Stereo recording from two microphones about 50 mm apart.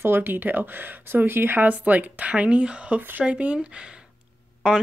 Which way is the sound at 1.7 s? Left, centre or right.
Right.